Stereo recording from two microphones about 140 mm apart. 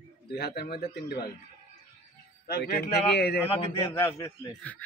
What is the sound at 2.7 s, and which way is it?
Speech, 90° left.